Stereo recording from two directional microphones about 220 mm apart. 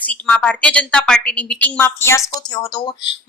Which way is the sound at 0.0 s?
5° left (ahead or behind).